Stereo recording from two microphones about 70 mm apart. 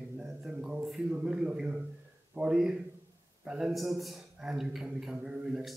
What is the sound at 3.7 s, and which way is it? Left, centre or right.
A man's voice, centre.